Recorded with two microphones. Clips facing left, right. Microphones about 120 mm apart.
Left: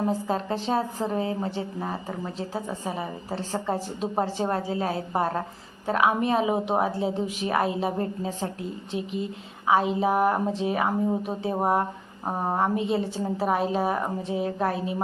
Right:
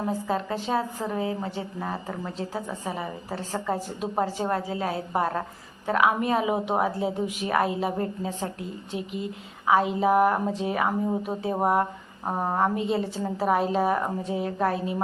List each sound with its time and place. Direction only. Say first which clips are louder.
0.3 s a woman's voice: left 1 dB; 25° left (ahead or behind)
1.8 s a woman's voice: even; 10° left (ahead or behind)
12.2 s a woman's voice: right 1 dB; 10° left (ahead or behind)